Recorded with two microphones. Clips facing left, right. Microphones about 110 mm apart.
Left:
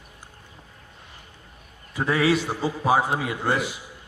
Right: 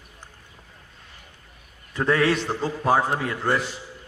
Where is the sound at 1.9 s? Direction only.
10° left (ahead or behind).